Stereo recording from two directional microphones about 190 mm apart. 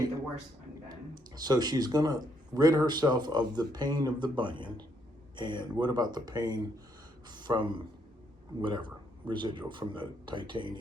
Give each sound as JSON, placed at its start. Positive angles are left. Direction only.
{"t": 0.9, "sound": "speech", "side_deg": -20}